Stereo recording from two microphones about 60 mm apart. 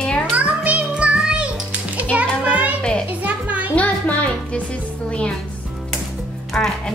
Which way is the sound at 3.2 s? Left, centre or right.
Right.